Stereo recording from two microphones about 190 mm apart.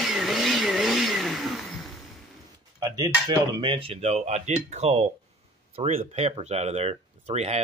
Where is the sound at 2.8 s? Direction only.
20° right (ahead or behind).